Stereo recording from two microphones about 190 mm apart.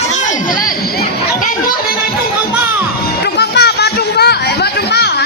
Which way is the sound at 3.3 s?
60° left (ahead or behind).